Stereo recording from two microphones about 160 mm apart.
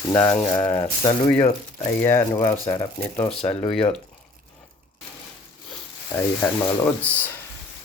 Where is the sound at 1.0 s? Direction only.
35° left (ahead or behind).